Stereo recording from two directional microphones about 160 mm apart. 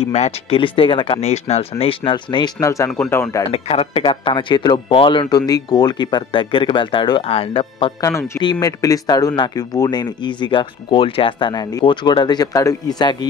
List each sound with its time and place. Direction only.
0.0 s speech: 40° left (ahead or behind)
2.6 s speech: 20° left (ahead or behind)
3.5 s speech: 40° left (ahead or behind)
8.0 s speech: 15° left (ahead or behind)